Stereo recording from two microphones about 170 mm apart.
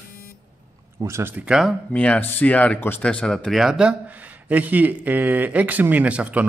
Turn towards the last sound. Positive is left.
turn(degrees=-10)  # may be behind; listen again after turning